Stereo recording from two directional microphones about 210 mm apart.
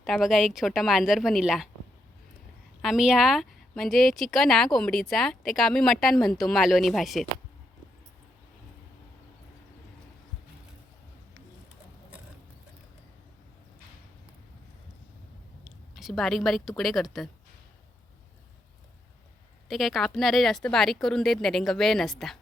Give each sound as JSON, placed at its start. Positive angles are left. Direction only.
{"t": 0.0, "sound": "speech", "side_deg": 0}
{"t": 2.8, "sound": "speech", "side_deg": 0}
{"t": 15.6, "sound": "a woman's voice", "side_deg": 0}
{"t": 19.6, "sound": "speech", "side_deg": 0}